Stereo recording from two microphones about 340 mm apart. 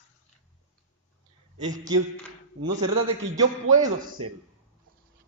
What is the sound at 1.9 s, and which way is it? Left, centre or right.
Speech, centre.